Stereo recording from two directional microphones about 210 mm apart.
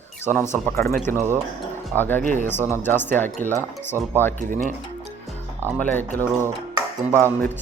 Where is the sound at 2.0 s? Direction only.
10° left (ahead or behind).